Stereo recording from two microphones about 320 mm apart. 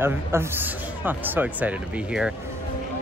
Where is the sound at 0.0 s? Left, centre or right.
Centre.